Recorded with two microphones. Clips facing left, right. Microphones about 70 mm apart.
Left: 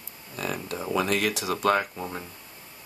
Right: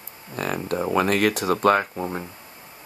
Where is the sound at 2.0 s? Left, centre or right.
Right.